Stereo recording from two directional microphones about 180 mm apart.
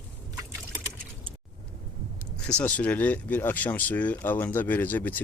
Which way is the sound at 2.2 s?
5° left (ahead or behind).